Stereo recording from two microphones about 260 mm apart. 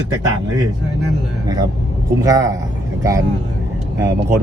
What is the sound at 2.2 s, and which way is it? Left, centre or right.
Speech, centre.